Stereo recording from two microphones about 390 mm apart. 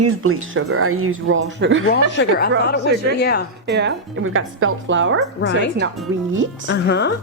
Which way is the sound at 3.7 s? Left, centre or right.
Right.